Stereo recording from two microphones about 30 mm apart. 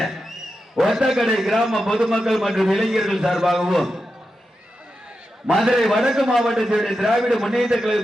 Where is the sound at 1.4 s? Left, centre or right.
Centre.